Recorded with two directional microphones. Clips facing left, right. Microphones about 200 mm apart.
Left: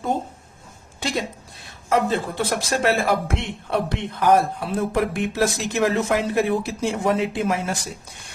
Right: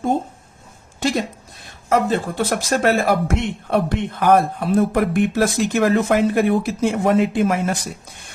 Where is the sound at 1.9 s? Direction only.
45° right (ahead or behind).